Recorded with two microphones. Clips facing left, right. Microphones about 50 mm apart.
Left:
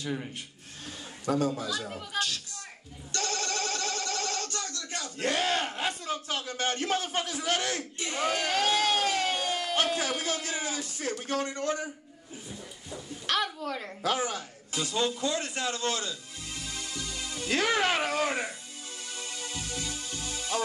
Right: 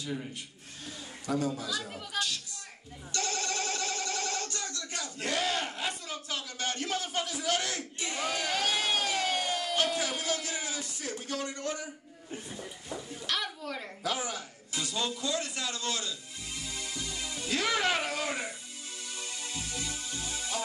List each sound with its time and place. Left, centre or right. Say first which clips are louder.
0.0 s a man's voice: left 2 dB; left
1.5 s speech: left 2 dB; left
2.1 s speech: left 2 dB; left
3.3 s a sound: left 1 dB; centre
5.2 s speech: left 3 dB; left
12.4 s a sound: left 2 dB; right
13.3 s a sound: left 5 dB; left
14.0 s a man's voice: left 5 dB; left
16.7 s music: left 1 dB; right
17.3 s speech: left 3 dB; left
19.1 s music: left 2 dB; left